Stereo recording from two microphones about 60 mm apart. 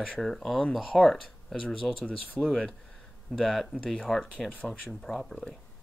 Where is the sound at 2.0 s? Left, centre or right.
Left.